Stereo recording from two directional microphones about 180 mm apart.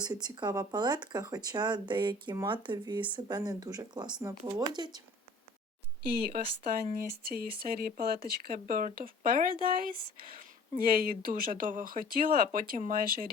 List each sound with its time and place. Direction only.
0.0 s speech: 20° right (ahead or behind)
6.3 s speech: 50° right (ahead or behind)